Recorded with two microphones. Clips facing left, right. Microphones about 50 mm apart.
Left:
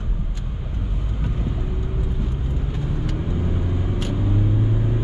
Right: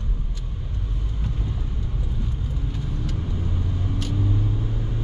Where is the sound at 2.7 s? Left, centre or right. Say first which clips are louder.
Left 4 dB; left.